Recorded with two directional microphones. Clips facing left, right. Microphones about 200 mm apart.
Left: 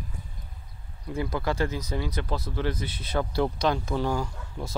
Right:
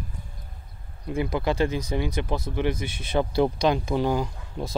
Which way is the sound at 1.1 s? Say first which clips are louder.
Right 3 dB; 20° right (ahead or behind).